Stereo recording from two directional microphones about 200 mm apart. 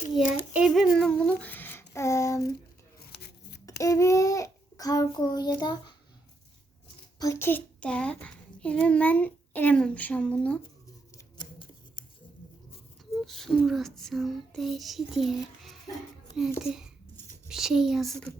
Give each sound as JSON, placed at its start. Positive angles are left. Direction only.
{"t": 0.1, "sound": "speech", "side_deg": -5}
{"t": 3.1, "sound": "scissors", "side_deg": 55}
{"t": 3.7, "sound": "child singing", "side_deg": 15}
{"t": 7.2, "sound": "a child's voice", "side_deg": 15}
{"t": 11.3, "sound": "scissors", "side_deg": 20}
{"t": 13.2, "sound": "child singing", "side_deg": 0}